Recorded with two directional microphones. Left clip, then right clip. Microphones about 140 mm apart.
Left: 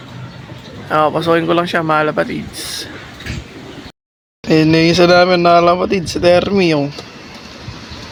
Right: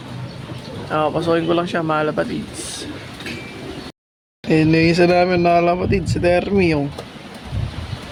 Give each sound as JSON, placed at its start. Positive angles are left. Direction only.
{"t": 0.9, "sound": "speech", "side_deg": 40}
{"t": 4.4, "sound": "a man's voice", "side_deg": 5}